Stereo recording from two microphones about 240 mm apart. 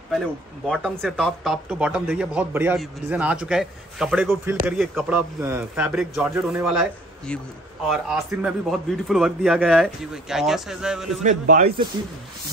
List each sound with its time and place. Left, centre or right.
0.7 s speech: centre
11.2 s speech: right